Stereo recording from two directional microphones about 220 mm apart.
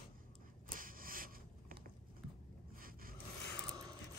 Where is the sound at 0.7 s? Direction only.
40° right (ahead or behind).